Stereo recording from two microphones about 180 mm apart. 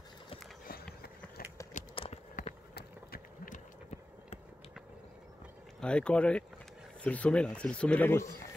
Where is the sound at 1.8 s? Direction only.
45° left (ahead or behind).